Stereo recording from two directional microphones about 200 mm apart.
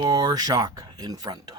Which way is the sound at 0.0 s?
20° right (ahead or behind).